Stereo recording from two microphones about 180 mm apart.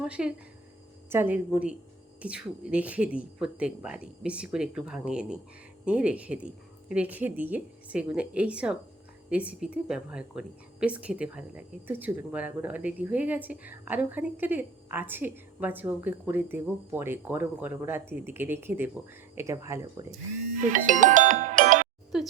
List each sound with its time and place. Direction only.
0.0 s a woman's voice: 5° right (ahead or behind); by 20.1 s 20° right (ahead or behind)
20.6 s music: 45° right (ahead or behind)
22.1 s a sound: 5° right (ahead or behind)